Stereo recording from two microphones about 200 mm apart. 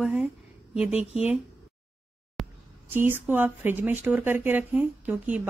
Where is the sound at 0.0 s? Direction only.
5° right (ahead or behind).